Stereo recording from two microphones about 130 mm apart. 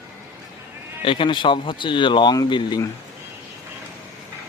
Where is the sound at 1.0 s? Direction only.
40° left (ahead or behind).